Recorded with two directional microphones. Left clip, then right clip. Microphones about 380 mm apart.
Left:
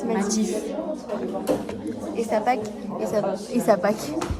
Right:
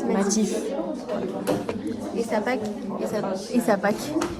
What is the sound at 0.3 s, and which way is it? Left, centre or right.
Speech, centre.